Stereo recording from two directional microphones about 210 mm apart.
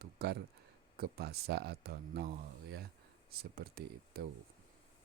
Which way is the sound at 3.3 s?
45° right (ahead or behind).